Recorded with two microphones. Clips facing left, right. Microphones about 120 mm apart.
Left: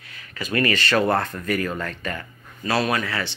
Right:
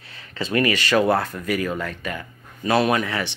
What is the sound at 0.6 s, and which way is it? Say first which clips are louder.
Speech: right 1 dB; 10° right (ahead or behind).